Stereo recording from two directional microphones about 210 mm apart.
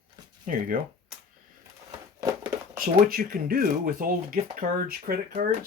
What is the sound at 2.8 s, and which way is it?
Speech, 45° right (ahead or behind).